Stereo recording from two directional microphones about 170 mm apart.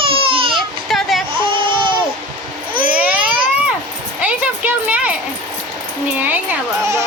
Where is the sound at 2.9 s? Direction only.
5° right (ahead or behind).